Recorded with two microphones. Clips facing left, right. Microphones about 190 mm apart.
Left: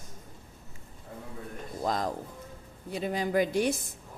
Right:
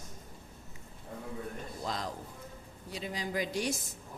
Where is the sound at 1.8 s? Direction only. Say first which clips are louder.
Left 8 dB; 50° left (ahead or behind).